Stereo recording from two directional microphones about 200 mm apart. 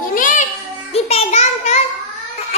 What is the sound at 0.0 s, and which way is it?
Child singing, 40° left (ahead or behind).